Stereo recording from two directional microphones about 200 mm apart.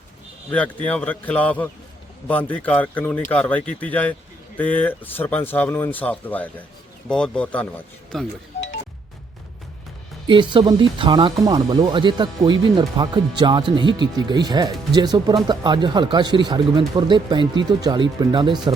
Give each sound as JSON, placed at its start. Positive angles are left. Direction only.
{"t": 0.5, "sound": "speech", "side_deg": 10}
{"t": 10.2, "sound": "speech", "side_deg": -25}